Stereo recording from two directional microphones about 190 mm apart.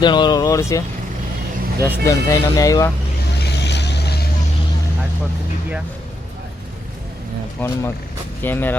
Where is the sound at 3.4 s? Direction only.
65° left (ahead or behind).